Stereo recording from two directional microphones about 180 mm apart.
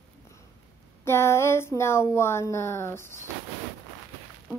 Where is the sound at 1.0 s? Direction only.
15° left (ahead or behind).